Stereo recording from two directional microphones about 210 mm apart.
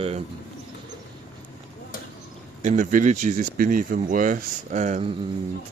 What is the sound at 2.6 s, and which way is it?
Speech, 35° right (ahead or behind).